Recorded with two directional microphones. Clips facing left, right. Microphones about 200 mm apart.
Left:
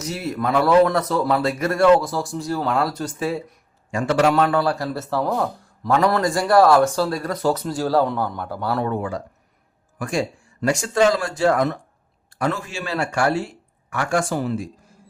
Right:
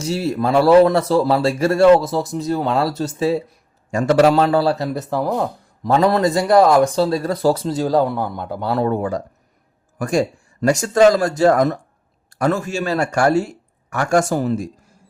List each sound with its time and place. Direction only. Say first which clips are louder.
0.0 s speech: right 5 dB; 30° right (ahead or behind)
3.9 s speech: right 4 dB; 40° right (ahead or behind); by 8.9 s 20° right (ahead or behind)
8.9 s speech: right 4 dB; 40° right (ahead or behind)